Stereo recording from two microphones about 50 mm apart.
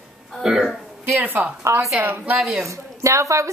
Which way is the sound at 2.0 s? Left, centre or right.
Right.